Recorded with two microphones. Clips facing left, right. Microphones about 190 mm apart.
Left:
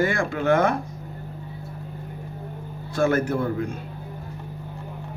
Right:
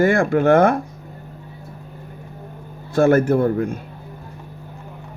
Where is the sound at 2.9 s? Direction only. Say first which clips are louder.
Right 7 dB; 45° right (ahead or behind).